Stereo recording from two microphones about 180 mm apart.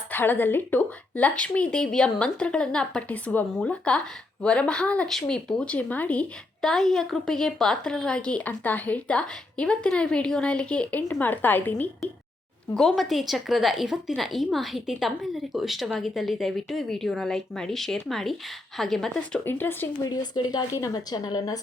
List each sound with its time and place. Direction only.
0.1 s a woman's voice: 10° left (ahead or behind)
20.1 s a woman's voice: 20° left (ahead or behind)